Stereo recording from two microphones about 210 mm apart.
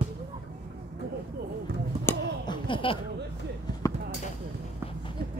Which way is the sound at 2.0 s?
20° left (ahead or behind).